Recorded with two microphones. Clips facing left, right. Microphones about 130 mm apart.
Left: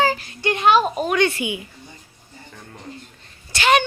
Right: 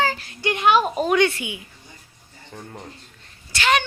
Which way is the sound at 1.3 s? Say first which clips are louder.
Left 6 dB; 15° left (ahead or behind).